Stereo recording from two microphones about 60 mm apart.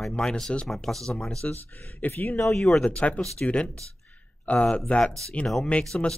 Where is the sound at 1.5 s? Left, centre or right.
Left.